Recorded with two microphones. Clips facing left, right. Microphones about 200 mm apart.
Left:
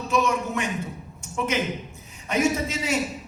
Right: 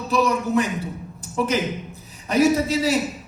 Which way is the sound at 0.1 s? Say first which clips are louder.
Right 4 dB; 35° right (ahead or behind).